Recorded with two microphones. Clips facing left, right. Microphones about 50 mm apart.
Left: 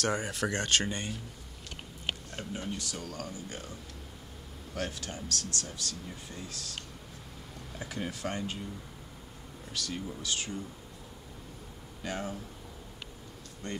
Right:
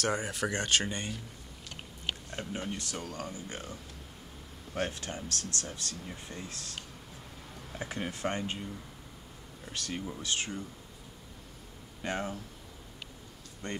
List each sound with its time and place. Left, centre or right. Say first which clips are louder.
0.0 s speech: even; centre
0.5 s speech: even; centre
0.8 s speech: left 1 dB; centre
2.3 s speech: right 1 dB; right
2.8 s speech: right 1 dB; right
4.7 s speech: right 2 dB; right
7.8 s speech: right 2 dB; right
9.7 s speech: even; right
12.0 s speech: right 2 dB; right
13.6 s speech: even; right